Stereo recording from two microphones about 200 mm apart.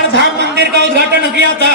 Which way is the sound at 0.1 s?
60° right (ahead or behind).